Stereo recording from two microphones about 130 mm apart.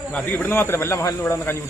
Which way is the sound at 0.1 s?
10° left (ahead or behind).